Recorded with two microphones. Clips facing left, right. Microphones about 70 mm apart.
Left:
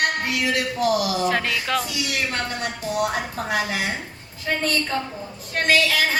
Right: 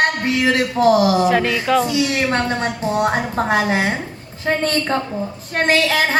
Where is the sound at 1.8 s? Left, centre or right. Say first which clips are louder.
Right 8 dB; right.